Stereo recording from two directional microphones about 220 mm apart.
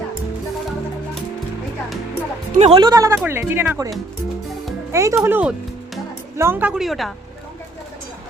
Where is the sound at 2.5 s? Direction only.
25° right (ahead or behind).